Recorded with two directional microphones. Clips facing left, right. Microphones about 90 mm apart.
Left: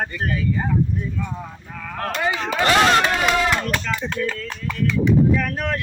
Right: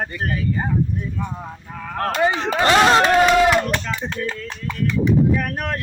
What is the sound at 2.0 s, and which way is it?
Speech, 30° right (ahead or behind).